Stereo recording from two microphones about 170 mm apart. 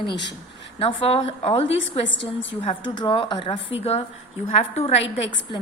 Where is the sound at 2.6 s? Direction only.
35° left (ahead or behind).